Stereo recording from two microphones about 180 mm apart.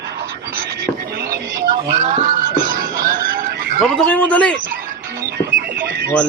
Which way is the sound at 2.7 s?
50° right (ahead or behind).